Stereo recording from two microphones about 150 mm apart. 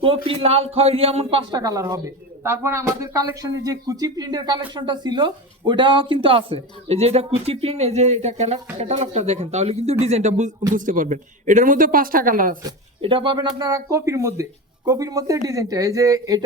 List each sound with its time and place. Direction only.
0.3 s speech: 40° right (ahead or behind)
10.8 s a woman's voice: 60° right (ahead or behind)
12.6 s speech: 35° right (ahead or behind)